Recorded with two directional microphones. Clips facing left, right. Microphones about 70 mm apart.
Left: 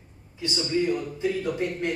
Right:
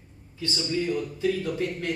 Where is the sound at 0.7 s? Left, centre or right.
Left.